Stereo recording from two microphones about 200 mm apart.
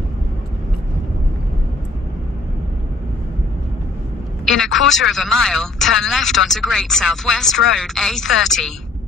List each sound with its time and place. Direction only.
4.5 s a man's voice: centre (ahead or behind)